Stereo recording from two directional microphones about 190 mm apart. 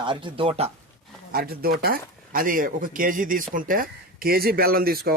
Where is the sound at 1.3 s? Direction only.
55° right (ahead or behind).